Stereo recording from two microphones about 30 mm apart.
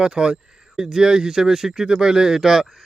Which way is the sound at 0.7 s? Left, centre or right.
Centre.